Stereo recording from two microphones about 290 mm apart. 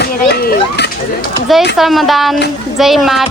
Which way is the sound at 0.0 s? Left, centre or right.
Left.